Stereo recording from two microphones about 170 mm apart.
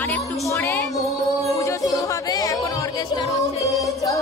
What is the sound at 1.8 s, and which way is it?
Music, 20° left (ahead or behind).